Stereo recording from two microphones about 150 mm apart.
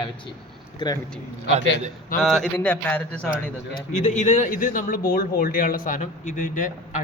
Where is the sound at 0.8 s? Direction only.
30° left (ahead or behind).